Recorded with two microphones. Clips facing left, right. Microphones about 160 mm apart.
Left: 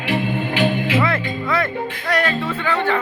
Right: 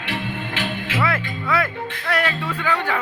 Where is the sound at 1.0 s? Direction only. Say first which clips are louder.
Left 3 dB; 5° right (ahead or behind).